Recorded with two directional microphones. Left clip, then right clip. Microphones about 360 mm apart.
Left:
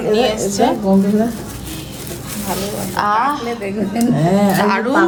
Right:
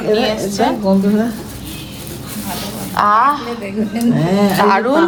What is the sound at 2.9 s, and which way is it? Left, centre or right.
Speech, centre.